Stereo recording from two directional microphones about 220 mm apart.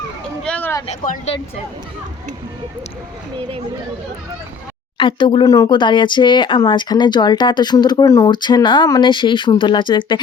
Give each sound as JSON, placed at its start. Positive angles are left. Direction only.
{"t": 0.4, "sound": "a sound", "side_deg": 5}
{"t": 0.9, "sound": "speech", "side_deg": 35}
{"t": 4.9, "sound": "speech", "side_deg": 20}